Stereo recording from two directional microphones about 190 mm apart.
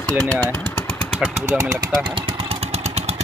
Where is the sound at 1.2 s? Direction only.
10° right (ahead or behind).